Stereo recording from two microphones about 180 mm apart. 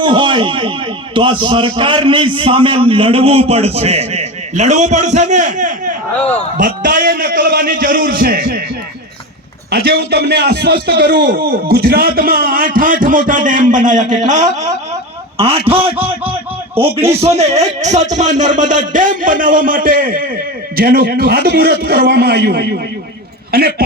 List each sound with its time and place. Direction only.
0.0 s a man's voice: 25° right (ahead or behind); by 8.5 s 60° right (ahead or behind)
9.7 s a man's voice: 65° right (ahead or behind); by 14.4 s 45° right (ahead or behind)
17.1 s a man's voice: 35° right (ahead or behind); by 23.8 s 60° right (ahead or behind)